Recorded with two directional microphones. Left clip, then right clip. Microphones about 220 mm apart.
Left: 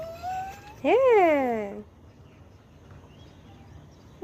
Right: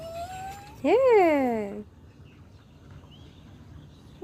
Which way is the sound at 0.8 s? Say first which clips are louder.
Even; 20° right (ahead or behind).